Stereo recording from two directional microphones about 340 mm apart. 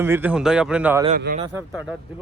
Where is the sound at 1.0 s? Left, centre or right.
Right.